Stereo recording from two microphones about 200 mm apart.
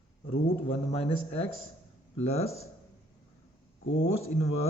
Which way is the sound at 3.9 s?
70° left (ahead or behind).